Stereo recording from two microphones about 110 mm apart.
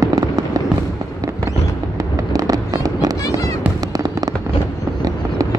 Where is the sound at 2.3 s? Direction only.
35° right (ahead or behind).